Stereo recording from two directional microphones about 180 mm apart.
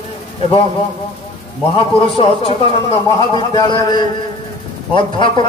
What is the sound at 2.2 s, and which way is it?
A man's voice, 30° left (ahead or behind).